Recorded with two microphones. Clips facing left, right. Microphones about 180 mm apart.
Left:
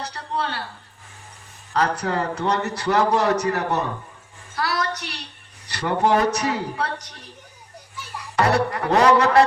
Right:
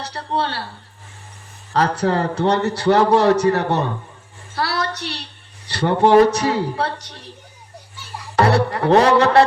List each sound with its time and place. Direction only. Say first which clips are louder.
0.0 s a man's voice: right 4 dB; 30° right (ahead or behind)
1.7 s a man's voice: right 4 dB; 30° right (ahead or behind)
4.5 s a sound: right 2 dB; 30° right (ahead or behind)
5.6 s a man's voice: right 5 dB; 30° right (ahead or behind)
8.4 s music: right 4 dB; 30° right (ahead or behind)